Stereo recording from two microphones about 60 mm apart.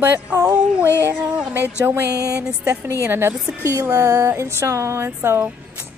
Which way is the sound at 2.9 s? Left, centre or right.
Right.